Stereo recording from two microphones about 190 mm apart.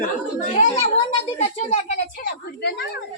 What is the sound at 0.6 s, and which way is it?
Speech, 35° left (ahead or behind).